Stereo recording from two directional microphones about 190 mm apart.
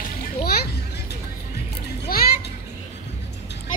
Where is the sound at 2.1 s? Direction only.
50° left (ahead or behind).